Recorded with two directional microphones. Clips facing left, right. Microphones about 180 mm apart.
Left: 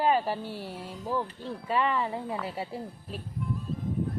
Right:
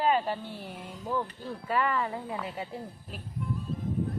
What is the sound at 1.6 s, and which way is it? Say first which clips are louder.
Speech: left 1 dB; 25° left (ahead or behind).